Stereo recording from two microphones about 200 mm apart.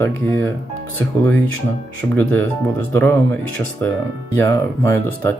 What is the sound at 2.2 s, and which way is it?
Speech, 10° left (ahead or behind).